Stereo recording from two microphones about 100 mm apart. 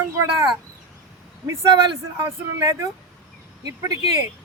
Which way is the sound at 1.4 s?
35° right (ahead or behind).